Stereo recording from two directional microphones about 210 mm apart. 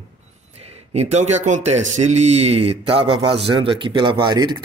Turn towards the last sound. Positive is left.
turn(degrees=-20)  # may be behind; listen again after turning